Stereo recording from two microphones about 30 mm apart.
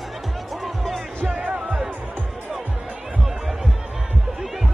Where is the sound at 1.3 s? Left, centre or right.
Right.